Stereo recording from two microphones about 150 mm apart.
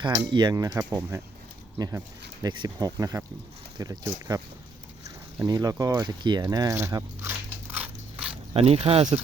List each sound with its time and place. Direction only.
0.0 s speech: 30° right (ahead or behind); by 1.2 s 15° right (ahead or behind)
2.4 s speech: 30° right (ahead or behind)
5.5 s speech: 25° right (ahead or behind)
5.8 s biting: 25° right (ahead or behind); by 8.4 s 10° right (ahead or behind)
8.5 s speech: 40° right (ahead or behind)